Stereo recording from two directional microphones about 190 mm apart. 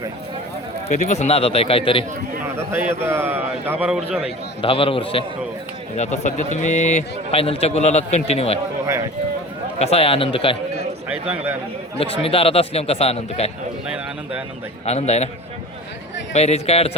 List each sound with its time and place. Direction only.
0.9 s a man's voice: 35° left (ahead or behind)
2.6 s a man's voice: 15° right (ahead or behind)
4.6 s a man's voice: 30° left (ahead or behind)
6.0 s a man's voice: 40° left (ahead or behind)
9.7 s a man's voice: 30° left (ahead or behind)
11.1 s a man's voice: 10° right (ahead or behind)
11.9 s a man's voice: 30° left (ahead or behind)
14.8 s a man's voice: 35° left (ahead or behind)
16.3 s a man's voice: 35° left (ahead or behind)